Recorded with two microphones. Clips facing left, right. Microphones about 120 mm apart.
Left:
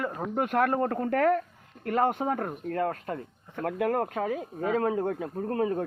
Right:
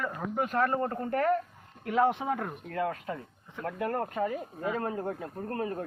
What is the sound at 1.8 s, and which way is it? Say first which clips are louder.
Speech: left 1 dB; 55° left (ahead or behind).